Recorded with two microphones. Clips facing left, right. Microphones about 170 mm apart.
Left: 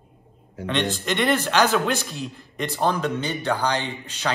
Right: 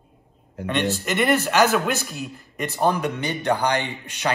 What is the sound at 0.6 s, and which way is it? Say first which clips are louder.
A man's voice: right 1 dB; 5° right (ahead or behind).